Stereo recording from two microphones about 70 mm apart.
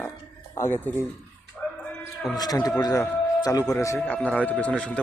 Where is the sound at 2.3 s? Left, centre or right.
Left.